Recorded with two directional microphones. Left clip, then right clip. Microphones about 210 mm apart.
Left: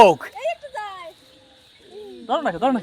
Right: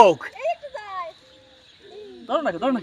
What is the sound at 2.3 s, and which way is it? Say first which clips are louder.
Speech: left 2 dB; 60° left (ahead or behind).